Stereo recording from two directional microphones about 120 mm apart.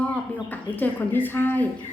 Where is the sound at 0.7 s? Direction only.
15° left (ahead or behind).